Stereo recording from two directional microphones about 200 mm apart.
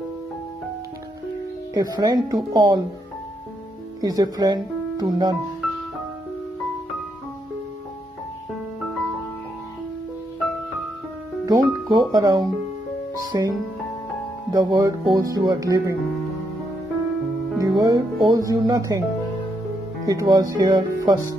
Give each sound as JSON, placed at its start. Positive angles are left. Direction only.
{"t": 1.7, "sound": "speech", "side_deg": -20}
{"t": 4.0, "sound": "speech", "side_deg": -20}
{"t": 11.4, "sound": "speech", "side_deg": -20}
{"t": 17.6, "sound": "speech", "side_deg": -20}
{"t": 20.1, "sound": "speech", "side_deg": -20}